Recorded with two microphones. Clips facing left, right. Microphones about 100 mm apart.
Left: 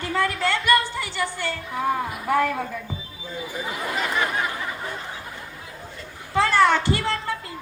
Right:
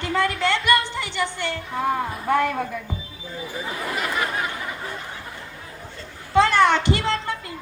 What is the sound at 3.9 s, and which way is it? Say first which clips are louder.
Speech: left 1 dB; 30° left (ahead or behind).